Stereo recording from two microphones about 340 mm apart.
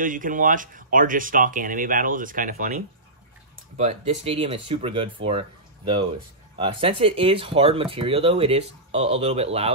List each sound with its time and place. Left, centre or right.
0.0 s speech: right